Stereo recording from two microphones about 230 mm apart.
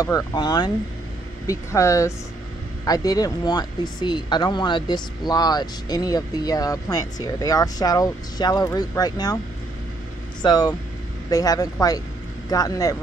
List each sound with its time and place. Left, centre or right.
0.0 s speech: centre
10.4 s speech: centre